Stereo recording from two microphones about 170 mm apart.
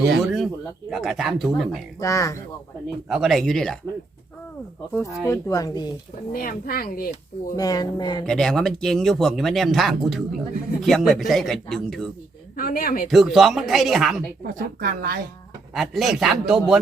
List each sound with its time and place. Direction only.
0.2 s speech: centre (ahead or behind)
2.0 s speech: 20° left (ahead or behind)
3.1 s speech: centre (ahead or behind)
4.9 s speech: 20° left (ahead or behind)
6.3 s speech: 60° left (ahead or behind)
7.5 s speech: 20° left (ahead or behind)
8.2 s speech: 5° left (ahead or behind)
12.5 s speech: 60° left (ahead or behind)
13.1 s speech: centre (ahead or behind)
14.4 s a woman's voice: 60° right (ahead or behind)
15.7 s speech: centre (ahead or behind)